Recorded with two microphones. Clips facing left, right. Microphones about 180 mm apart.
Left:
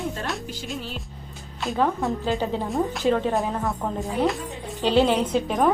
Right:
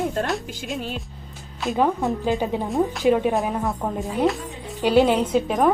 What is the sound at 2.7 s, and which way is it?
Speech, centre (ahead or behind).